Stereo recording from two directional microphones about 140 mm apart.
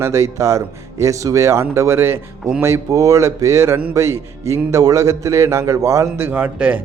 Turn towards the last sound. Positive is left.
turn(degrees=-10)  # may be behind; listen again after turning